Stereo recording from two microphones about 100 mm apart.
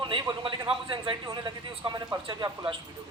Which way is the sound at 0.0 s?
55° right (ahead or behind).